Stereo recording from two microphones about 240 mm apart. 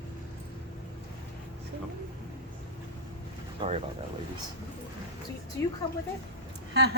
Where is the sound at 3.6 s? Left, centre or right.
Centre.